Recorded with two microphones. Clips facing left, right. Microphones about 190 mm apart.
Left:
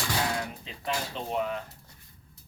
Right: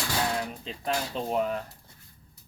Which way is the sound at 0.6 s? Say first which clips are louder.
Right 3 dB; 40° right (ahead or behind).